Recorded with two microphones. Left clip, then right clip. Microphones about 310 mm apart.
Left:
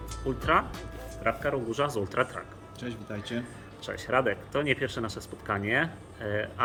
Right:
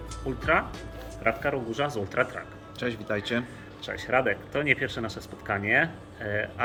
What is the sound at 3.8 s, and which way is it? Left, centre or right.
Speech, centre.